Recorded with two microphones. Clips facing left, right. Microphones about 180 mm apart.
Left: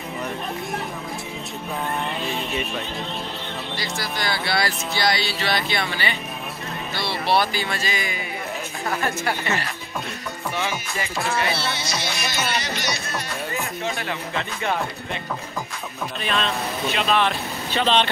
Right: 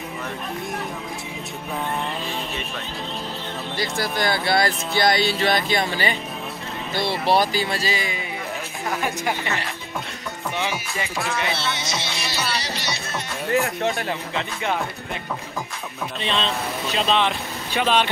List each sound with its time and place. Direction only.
3.7 s speech: 50° right (ahead or behind); by 8.2 s 30° right (ahead or behind)
9.0 s speech: 15° right (ahead or behind)
10.5 s speech: 15° right (ahead or behind)
11.4 s music: 20° right (ahead or behind)
16.2 s speech: 25° right (ahead or behind)
17.2 s speech: 15° right (ahead or behind)